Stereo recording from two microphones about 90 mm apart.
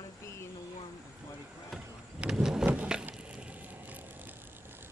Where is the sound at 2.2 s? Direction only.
5° right (ahead or behind).